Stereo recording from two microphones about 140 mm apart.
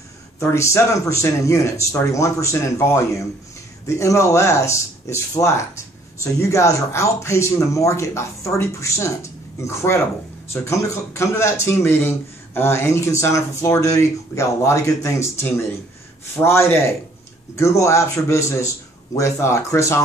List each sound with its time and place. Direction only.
0.4 s speech: 20° left (ahead or behind)
16.4 s speech: 20° left (ahead or behind)